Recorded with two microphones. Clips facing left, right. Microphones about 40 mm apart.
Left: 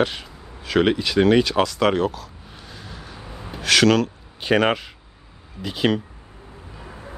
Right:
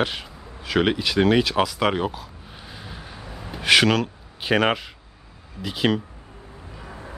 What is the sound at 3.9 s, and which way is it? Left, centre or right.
Speech, centre.